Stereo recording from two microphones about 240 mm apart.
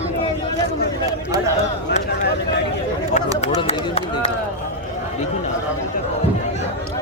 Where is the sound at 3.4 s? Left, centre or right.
Left.